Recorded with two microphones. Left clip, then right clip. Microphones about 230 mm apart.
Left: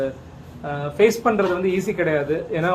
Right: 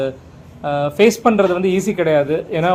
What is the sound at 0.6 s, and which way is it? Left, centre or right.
A man's voice, right.